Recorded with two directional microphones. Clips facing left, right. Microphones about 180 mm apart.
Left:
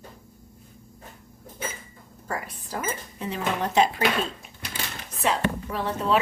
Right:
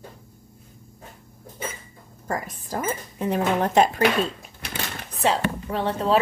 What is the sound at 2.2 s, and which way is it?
Speech, 45° right (ahead or behind).